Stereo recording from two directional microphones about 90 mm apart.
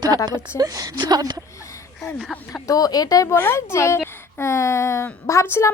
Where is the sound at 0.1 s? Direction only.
45° right (ahead or behind).